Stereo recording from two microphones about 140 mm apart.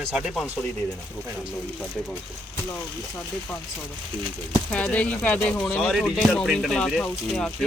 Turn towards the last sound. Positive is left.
turn(degrees=5)  # may be behind; listen again after turning